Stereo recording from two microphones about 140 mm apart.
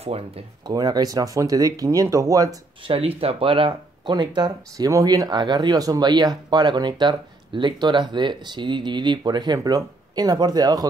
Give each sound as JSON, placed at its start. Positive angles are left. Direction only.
{"t": 0.7, "sound": "speech", "side_deg": -30}
{"t": 2.8, "sound": "speech", "side_deg": -40}